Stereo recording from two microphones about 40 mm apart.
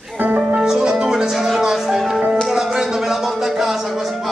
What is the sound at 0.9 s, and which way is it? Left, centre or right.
Music, centre.